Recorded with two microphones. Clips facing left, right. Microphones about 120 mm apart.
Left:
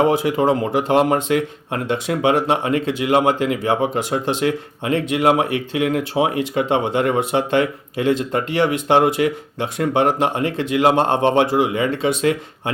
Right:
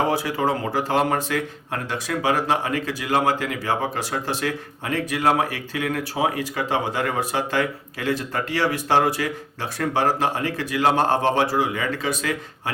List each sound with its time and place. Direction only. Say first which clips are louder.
0.1 s speech: left 5 dB; 20° left (ahead or behind)